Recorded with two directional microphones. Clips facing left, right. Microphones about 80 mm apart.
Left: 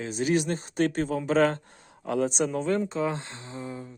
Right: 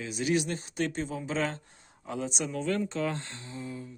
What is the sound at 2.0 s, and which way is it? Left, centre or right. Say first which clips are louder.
Speech: left 8 dB; left.